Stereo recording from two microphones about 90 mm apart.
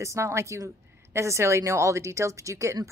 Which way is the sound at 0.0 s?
30° right (ahead or behind).